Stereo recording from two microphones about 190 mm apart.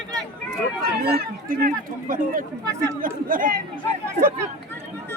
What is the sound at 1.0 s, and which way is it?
Speech, 50° right (ahead or behind).